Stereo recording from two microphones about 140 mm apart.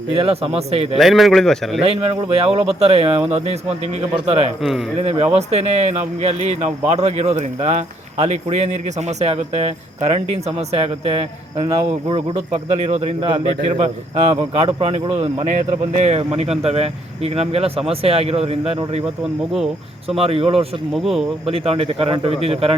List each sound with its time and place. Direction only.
0.1 s speech: 45° right (ahead or behind)
0.9 s speech: centre (ahead or behind)
1.8 s speech: 45° right (ahead or behind)
20.1 s speech: 45° right (ahead or behind)
20.9 s speech: centre (ahead or behind)
21.4 s speech: 45° right (ahead or behind)